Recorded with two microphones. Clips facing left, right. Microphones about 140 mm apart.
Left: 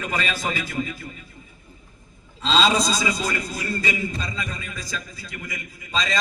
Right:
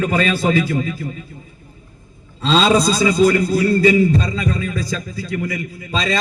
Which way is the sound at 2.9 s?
30° right (ahead or behind).